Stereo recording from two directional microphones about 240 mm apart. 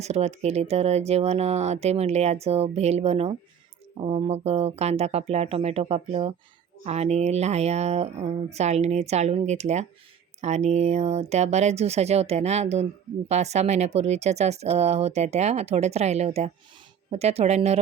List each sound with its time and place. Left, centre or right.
0.0 s speech: right